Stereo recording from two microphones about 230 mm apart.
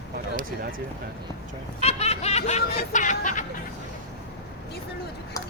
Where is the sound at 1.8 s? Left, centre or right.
Left.